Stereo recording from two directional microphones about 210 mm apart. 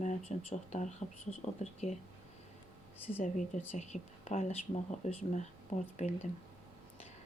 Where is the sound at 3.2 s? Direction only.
35° left (ahead or behind).